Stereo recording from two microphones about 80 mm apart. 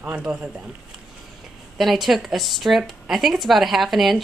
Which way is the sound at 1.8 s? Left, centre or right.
Centre.